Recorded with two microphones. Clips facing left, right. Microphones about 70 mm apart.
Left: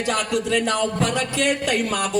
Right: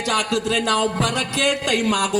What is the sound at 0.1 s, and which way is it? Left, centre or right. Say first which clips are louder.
A man's voice: right 1 dB; right.